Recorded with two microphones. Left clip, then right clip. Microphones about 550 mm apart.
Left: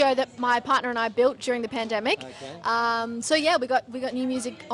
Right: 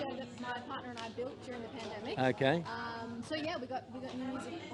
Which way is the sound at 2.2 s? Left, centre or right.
Right.